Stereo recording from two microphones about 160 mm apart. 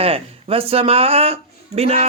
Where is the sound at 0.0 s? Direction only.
40° right (ahead or behind).